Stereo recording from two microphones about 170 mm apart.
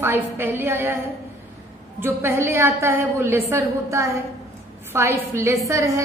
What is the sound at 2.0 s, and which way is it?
A woman's voice, 15° right (ahead or behind).